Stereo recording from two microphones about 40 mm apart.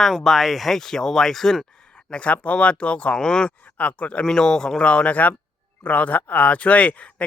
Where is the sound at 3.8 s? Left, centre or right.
Left.